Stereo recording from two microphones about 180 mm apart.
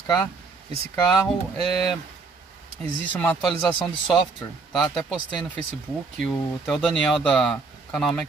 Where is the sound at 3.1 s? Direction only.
10° left (ahead or behind).